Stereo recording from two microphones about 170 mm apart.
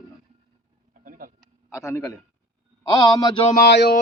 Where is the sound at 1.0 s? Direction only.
55° right (ahead or behind).